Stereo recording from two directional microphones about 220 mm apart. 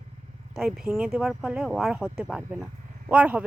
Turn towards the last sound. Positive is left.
turn(degrees=-5)  # may be behind; listen again after turning